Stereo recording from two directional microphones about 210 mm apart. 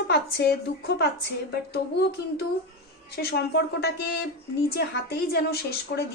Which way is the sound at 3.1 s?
50° left (ahead or behind).